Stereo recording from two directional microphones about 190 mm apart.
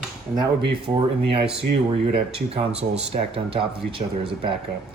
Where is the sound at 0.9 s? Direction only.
25° right (ahead or behind).